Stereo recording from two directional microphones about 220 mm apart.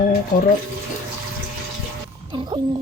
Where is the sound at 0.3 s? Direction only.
40° left (ahead or behind).